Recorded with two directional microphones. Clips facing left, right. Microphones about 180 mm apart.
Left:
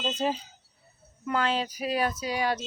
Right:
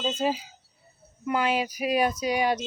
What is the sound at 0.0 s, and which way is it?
Speech, 5° right (ahead or behind).